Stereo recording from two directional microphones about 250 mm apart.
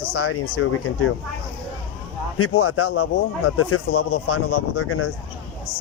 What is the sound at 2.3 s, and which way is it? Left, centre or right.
Speech, left.